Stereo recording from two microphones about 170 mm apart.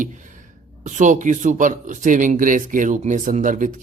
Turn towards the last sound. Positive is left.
turn(degrees=-50)  # may be behind; listen again after turning